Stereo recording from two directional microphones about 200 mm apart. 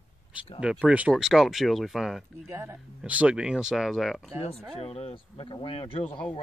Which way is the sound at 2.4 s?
10° right (ahead or behind).